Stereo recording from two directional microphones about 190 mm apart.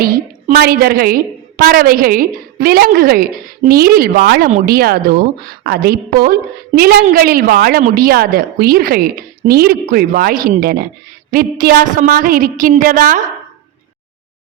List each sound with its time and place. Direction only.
0.0 s a woman's voice: 50° right (ahead or behind)